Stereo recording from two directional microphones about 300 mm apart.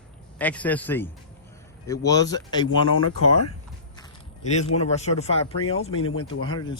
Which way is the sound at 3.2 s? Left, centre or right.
Left.